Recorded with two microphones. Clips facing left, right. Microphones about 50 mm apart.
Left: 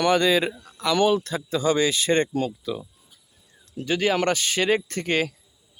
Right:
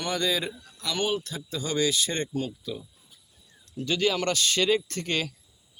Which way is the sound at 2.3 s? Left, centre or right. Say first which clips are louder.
Left 5 dB; left.